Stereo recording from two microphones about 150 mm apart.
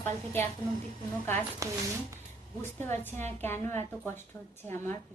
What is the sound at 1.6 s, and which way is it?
Speech, 20° right (ahead or behind).